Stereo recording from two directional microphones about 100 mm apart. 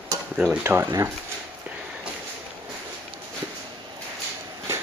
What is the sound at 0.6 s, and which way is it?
Speech, 25° right (ahead or behind).